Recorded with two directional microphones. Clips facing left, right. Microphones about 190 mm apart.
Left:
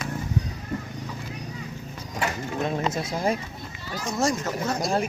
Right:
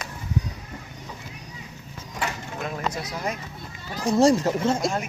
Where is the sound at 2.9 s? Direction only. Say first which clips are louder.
Left 5 dB; 25° left (ahead or behind).